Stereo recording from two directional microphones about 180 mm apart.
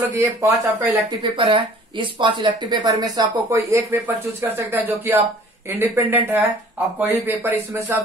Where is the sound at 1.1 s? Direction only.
25° right (ahead or behind).